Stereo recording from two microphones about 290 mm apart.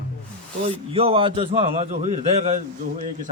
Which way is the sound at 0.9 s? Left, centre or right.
Centre.